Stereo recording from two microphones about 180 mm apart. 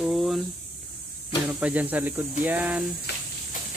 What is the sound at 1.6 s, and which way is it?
Speech, 10° right (ahead or behind).